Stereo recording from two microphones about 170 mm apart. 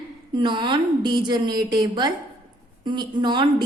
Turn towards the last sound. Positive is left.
turn(degrees=-25)  # may be behind; listen again after turning